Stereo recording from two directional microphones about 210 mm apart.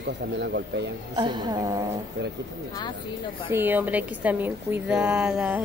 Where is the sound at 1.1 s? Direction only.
20° right (ahead or behind).